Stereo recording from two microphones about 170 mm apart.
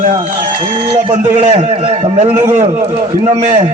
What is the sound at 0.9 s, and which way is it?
Speech, 40° right (ahead or behind).